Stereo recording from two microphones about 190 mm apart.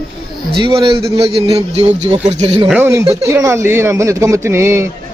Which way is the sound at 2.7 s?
10° right (ahead or behind).